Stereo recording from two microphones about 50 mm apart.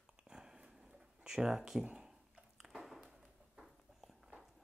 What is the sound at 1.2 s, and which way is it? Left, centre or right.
Speech, centre.